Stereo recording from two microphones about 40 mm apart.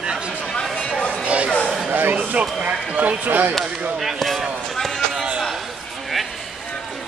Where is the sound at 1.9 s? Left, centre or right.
Right.